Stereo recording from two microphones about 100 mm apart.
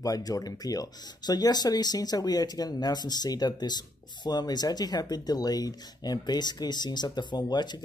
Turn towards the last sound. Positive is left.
turn(degrees=45)  # may be behind; listen again after turning